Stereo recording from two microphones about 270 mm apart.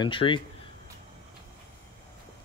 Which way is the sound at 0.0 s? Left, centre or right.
Centre.